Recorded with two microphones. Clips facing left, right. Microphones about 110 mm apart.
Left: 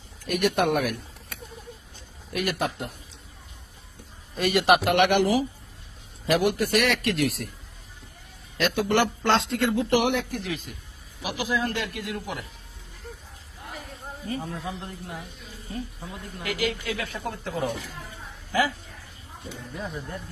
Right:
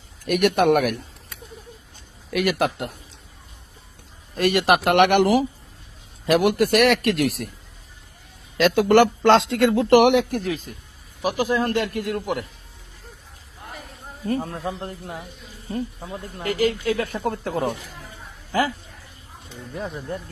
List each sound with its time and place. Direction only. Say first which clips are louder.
0.3 s a man's voice: right 5 dB; 60° right (ahead or behind)
2.3 s a man's voice: right 6 dB; 80° right
4.4 s a man's voice: right 2 dB; 50° right (ahead or behind)
8.5 s a man's voice: right 8 dB; 85° right
10.4 s a man's voice: right 5 dB; 40° right (ahead or behind)
14.6 s a woman's voice: right 5 dB; 40° right (ahead or behind); by 17.7 s 55° right (ahead or behind)
19.7 s speech: right 6 dB; 25° right (ahead or behind)